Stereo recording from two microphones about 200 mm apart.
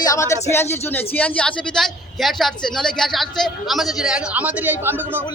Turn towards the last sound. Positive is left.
turn(degrees=-10)  # may be behind; listen again after turning